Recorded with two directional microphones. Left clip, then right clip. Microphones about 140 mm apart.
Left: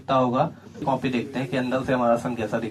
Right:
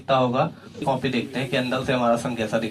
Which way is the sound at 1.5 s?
25° right (ahead or behind).